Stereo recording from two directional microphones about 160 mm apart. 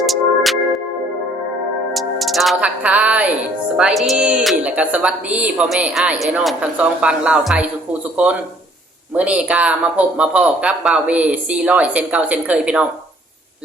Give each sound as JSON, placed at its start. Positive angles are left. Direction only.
{"t": 0.0, "sound": "music", "side_deg": 0}
{"t": 1.9, "sound": "a woman's voice", "side_deg": 0}